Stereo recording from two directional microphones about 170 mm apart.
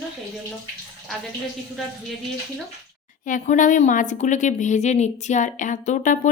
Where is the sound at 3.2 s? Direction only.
50° left (ahead or behind).